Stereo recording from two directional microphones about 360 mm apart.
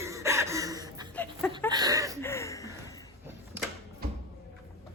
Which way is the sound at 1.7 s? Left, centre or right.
Centre.